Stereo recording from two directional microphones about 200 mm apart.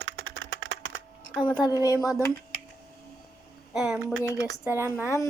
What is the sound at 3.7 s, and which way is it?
Speech, 5° right (ahead or behind).